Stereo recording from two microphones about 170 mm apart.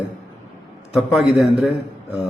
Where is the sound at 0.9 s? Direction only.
Centre (ahead or behind).